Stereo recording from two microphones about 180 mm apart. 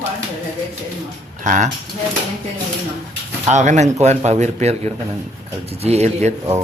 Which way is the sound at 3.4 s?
40° right (ahead or behind).